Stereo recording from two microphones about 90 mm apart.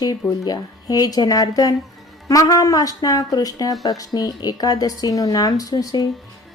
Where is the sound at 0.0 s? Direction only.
45° left (ahead or behind).